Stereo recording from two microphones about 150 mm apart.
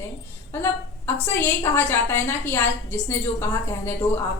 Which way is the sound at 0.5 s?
15° left (ahead or behind).